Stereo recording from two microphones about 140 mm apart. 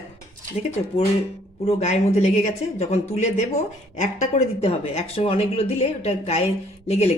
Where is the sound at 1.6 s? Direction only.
50° left (ahead or behind).